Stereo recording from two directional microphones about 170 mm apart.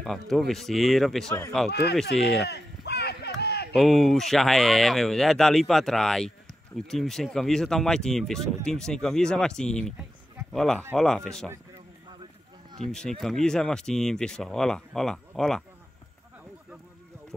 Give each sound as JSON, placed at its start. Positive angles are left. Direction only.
{"t": 0.0, "sound": "speech", "side_deg": 0}
{"t": 1.7, "sound": "speech", "side_deg": 75}
{"t": 2.4, "sound": "a sound", "side_deg": 75}
{"t": 3.7, "sound": "speech", "side_deg": 0}
{"t": 13.2, "sound": "speech", "side_deg": 0}